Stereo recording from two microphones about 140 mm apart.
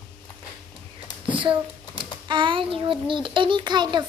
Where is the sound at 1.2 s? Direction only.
35° right (ahead or behind).